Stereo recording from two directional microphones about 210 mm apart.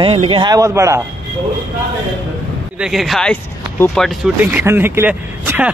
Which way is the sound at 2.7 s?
5° right (ahead or behind).